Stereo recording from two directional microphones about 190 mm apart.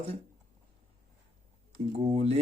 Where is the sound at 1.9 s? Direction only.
35° right (ahead or behind).